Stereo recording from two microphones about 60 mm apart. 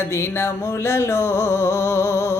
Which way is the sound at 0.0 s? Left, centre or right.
Left.